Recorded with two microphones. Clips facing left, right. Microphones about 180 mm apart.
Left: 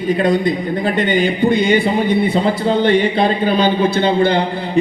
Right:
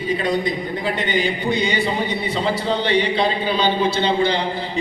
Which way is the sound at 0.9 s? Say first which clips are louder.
Left 6 dB; 55° left (ahead or behind).